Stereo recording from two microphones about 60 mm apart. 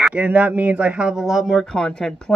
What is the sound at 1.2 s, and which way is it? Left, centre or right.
Speech, centre.